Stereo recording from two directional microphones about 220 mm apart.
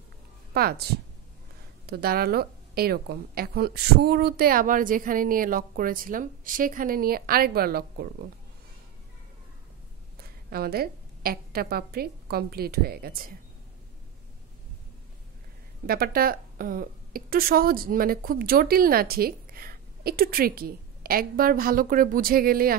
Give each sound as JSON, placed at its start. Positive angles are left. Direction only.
{"t": 0.6, "sound": "a woman's voice", "side_deg": -45}
{"t": 1.9, "sound": "a woman's voice", "side_deg": -45}
{"t": 10.5, "sound": "a woman's voice", "side_deg": -45}
{"t": 15.9, "sound": "a woman's voice", "side_deg": -45}